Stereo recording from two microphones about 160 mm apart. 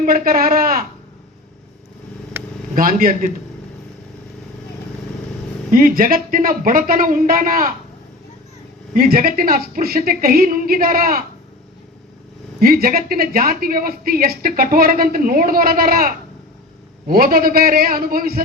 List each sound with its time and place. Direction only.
0.0 s speech: 60° right (ahead or behind)
2.3 s a sound: 15° right (ahead or behind)
2.7 s speech: 60° right (ahead or behind)
5.7 s speech: 60° right (ahead or behind)
9.0 s speech: 60° right (ahead or behind)
12.5 s a man's voice: 65° right (ahead or behind)